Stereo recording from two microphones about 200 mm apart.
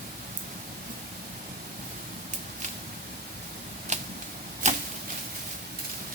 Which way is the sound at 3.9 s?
35° right (ahead or behind).